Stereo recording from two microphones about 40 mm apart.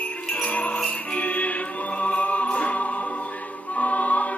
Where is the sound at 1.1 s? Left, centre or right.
Left.